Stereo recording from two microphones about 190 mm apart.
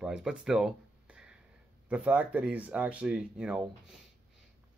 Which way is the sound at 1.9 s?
5° right (ahead or behind).